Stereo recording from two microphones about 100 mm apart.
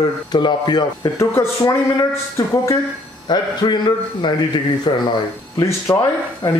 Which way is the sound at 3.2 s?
45° left (ahead or behind).